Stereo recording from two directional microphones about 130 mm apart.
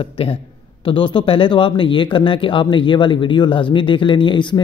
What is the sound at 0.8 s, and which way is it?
Speech, 40° left (ahead or behind).